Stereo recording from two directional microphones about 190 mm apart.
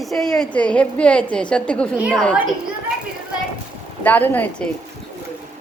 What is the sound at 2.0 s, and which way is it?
Speech, 5° right (ahead or behind).